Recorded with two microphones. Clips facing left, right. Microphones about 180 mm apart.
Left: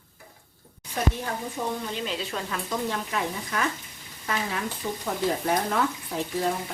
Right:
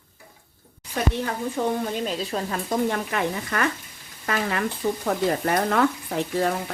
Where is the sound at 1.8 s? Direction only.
45° right (ahead or behind).